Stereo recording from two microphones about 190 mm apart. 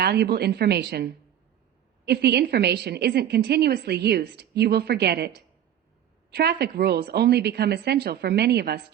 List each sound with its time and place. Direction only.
0.0 s a woman's voice: 60° right (ahead or behind)
6.3 s a woman's voice: 60° right (ahead or behind)